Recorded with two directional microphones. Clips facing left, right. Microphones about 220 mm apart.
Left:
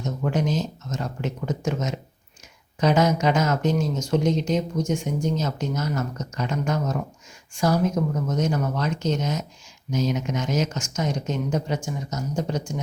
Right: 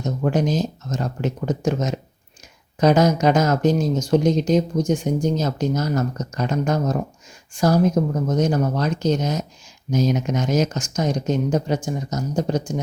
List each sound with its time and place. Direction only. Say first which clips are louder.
0.2 s speech: right 4 dB; 40° right (ahead or behind)